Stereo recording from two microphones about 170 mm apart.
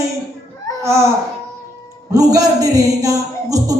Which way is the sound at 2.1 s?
20° right (ahead or behind).